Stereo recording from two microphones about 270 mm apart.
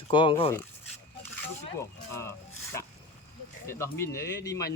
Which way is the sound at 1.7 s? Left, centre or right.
Centre.